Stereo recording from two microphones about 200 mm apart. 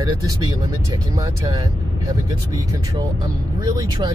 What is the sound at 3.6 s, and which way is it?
Speech, 20° right (ahead or behind).